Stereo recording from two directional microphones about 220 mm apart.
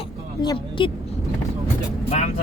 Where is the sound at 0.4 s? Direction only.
20° left (ahead or behind).